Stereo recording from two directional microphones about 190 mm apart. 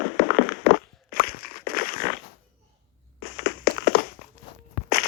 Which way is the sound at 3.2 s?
65° left (ahead or behind).